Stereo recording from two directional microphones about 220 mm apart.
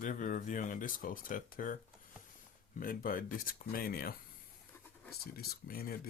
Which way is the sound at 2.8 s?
40° left (ahead or behind).